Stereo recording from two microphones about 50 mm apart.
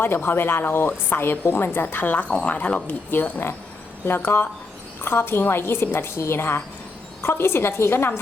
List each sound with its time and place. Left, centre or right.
0.0 s a woman's voice: left
3.1 s a woman's voice: left